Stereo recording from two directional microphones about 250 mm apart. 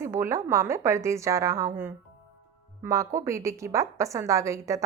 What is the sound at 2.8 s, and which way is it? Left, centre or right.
Speech, centre.